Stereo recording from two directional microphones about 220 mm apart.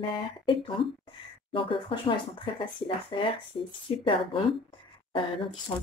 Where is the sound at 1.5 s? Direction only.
25° left (ahead or behind).